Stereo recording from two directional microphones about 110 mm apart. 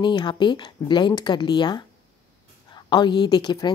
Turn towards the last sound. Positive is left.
turn(degrees=40)  # may be behind; listen again after turning